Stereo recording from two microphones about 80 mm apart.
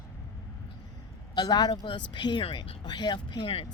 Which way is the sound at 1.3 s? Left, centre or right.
Left.